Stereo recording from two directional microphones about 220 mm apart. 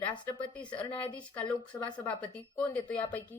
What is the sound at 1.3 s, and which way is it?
A woman's voice, 5° left (ahead or behind).